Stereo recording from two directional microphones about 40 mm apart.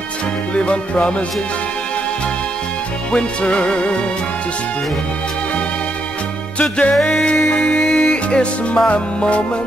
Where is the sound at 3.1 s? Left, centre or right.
Left.